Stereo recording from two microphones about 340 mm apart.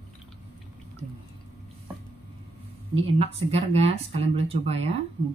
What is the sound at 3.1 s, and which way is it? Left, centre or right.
Speech, centre.